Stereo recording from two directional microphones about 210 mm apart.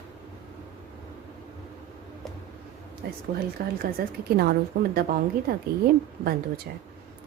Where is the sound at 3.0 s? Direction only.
50° right (ahead or behind).